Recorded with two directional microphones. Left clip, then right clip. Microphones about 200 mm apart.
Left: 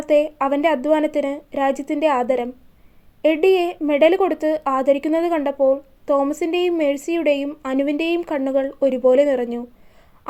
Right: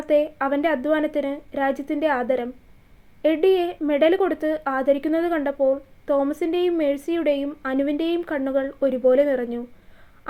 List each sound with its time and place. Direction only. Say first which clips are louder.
0.0 s a woman's voice: left 3 dB; 15° left (ahead or behind)